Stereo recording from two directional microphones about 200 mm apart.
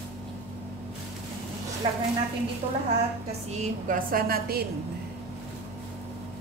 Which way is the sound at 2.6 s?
25° right (ahead or behind).